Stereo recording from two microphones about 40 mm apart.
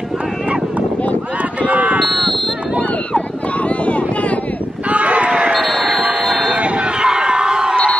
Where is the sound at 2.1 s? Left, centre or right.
Centre.